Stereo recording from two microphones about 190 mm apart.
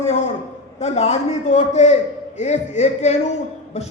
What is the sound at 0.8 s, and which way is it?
A man's voice, 35° left (ahead or behind).